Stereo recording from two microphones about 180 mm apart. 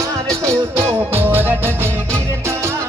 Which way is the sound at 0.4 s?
15° right (ahead or behind).